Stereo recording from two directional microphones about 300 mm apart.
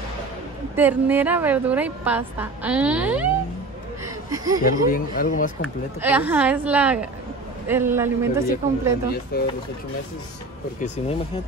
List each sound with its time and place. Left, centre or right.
0.7 s a woman's voice: centre
4.0 s a sound: centre
4.6 s a man's voice: left
5.9 s a woman's voice: centre
9.3 s speech: left
11.0 s a man's voice: left